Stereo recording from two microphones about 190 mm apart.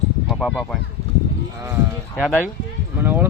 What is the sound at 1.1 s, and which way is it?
Cattle, 30° left (ahead or behind).